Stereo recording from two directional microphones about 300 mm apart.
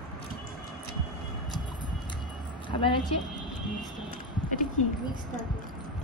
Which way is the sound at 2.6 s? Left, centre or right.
Centre.